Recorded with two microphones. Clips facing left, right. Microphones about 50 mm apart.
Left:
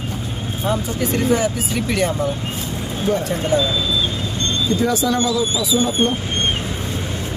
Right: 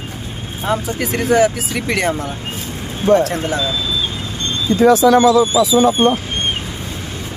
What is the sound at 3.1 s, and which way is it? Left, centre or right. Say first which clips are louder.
Speech: right 5 dB; right.